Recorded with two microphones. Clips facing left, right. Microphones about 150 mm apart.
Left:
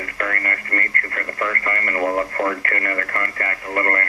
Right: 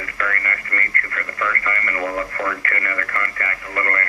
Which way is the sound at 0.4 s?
45° left (ahead or behind).